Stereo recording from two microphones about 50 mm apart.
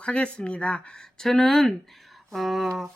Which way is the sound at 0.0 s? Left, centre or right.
Left.